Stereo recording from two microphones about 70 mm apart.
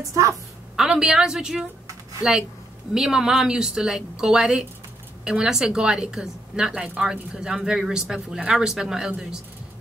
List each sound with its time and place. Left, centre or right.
0.1 s a woman's voice: right
0.7 s speech: centre
2.9 s speech: centre